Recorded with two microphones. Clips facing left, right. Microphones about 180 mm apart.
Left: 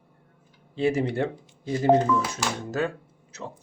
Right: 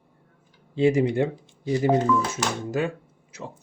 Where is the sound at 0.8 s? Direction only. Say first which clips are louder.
Right 4 dB; 15° right (ahead or behind).